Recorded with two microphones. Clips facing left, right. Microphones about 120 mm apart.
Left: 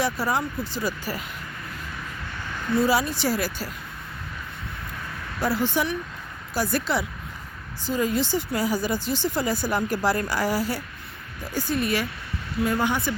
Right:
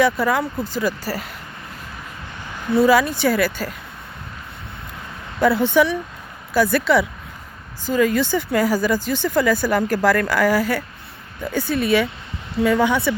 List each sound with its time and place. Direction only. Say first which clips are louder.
0.0 s speech: right 7 dB; 55° right (ahead or behind)
2.7 s speech: right 7 dB; 60° right (ahead or behind)
5.4 s speech: right 8 dB; 60° right (ahead or behind); by 8.2 s 75° right (ahead or behind)
8.2 s speech: right 6 dB; 55° right (ahead or behind)
10.2 s speech: right 7 dB; 90° right
10.5 s speech: right 6 dB; 50° right (ahead or behind)
11.7 s speech: right 3 dB; 90° right
12.6 s speech: right 7 dB; 80° right